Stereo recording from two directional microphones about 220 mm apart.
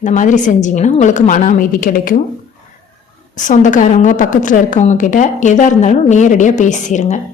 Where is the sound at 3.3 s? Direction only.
35° left (ahead or behind).